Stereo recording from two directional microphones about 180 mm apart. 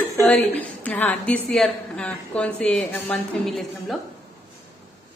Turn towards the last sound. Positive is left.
turn(degrees=0)  # may be behind; listen again after turning